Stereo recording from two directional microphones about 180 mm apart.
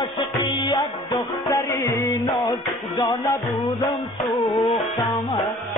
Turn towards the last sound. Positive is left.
turn(degrees=0)  # may be behind; listen again after turning